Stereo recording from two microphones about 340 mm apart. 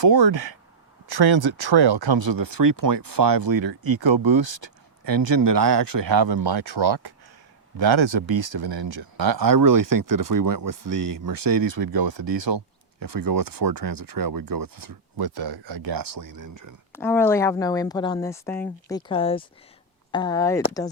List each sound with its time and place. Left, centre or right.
0.0 s speech: right
16.4 s speech: right
16.9 s speech: centre